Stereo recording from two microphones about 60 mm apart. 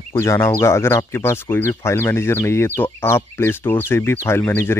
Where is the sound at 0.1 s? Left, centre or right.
Left.